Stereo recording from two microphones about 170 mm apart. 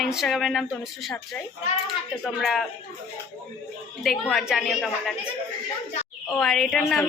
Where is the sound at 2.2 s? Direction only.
Centre (ahead or behind).